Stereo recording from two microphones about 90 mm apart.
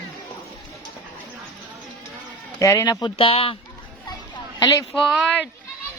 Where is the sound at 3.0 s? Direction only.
90° left.